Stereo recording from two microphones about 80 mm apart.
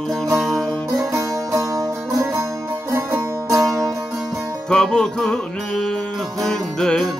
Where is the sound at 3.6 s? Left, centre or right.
Centre.